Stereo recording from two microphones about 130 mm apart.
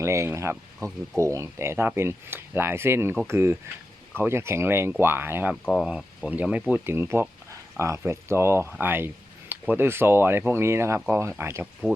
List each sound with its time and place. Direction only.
0.0 s speech: 20° right (ahead or behind)
11.6 s speech: centre (ahead or behind)